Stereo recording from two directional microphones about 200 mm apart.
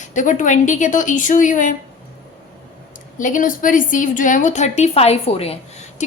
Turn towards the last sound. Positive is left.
turn(degrees=30)  # may be behind; listen again after turning